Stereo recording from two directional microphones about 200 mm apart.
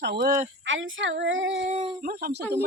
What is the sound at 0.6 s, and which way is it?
Speech, 70° right (ahead or behind).